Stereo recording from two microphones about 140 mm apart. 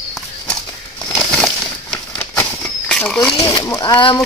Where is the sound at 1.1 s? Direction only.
5° left (ahead or behind).